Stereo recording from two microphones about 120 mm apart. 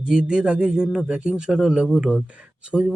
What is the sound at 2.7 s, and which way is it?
Speech, 5° left (ahead or behind).